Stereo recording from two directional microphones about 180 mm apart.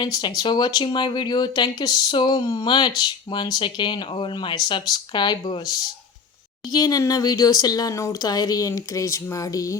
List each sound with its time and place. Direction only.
0.0 s speech: 25° left (ahead or behind)
6.7 s speech: 20° left (ahead or behind)